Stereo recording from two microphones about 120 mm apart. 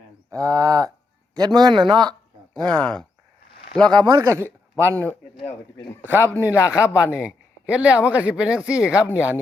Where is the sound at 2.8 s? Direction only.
5° left (ahead or behind).